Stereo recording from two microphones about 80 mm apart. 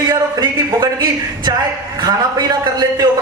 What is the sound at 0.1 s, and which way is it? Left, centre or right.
Speech, right.